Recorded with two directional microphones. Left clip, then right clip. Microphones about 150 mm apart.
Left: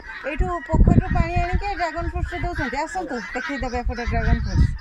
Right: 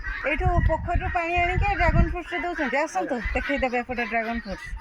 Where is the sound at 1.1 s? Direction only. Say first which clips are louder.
Right 2 dB; centre (ahead or behind).